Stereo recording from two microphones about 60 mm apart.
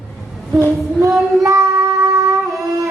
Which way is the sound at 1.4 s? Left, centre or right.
Right.